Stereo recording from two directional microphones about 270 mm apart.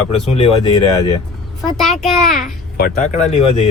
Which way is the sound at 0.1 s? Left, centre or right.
Left.